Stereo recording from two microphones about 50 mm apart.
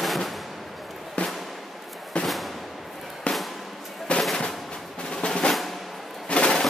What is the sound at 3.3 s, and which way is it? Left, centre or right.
Music, left.